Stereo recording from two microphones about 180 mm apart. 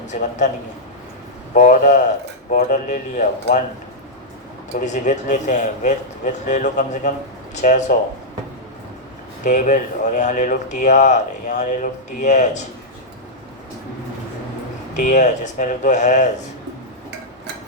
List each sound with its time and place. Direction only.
0.1 s speech: 40° left (ahead or behind)
1.5 s speech: 45° left (ahead or behind)
4.9 s speech: 40° left (ahead or behind)
9.4 s speech: 45° left (ahead or behind)
14.9 s speech: 40° left (ahead or behind)